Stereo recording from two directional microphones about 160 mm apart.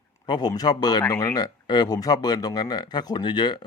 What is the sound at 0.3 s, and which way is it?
A man's voice, 25° left (ahead or behind).